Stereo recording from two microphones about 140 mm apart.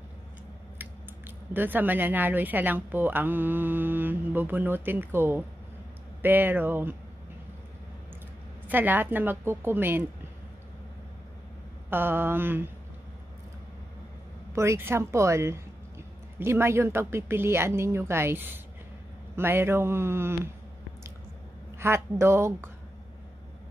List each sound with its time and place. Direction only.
1.5 s speech: 15° right (ahead or behind)
8.6 s speech: 15° right (ahead or behind)
11.9 s speech: 15° right (ahead or behind)
14.5 s speech: 20° right (ahead or behind)
21.7 s speech: 20° right (ahead or behind)